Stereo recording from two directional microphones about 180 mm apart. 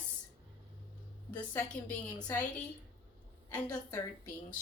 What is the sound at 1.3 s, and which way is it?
A woman's voice, 10° left (ahead or behind).